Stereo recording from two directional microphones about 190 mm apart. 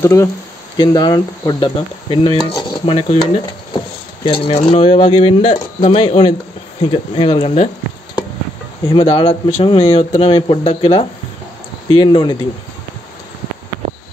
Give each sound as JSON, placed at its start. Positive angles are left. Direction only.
{"t": 0.0, "sound": "speech", "side_deg": 15}
{"t": 8.9, "sound": "speech", "side_deg": 30}